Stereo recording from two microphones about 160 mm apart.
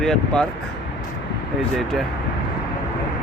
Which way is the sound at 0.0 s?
5° left (ahead or behind).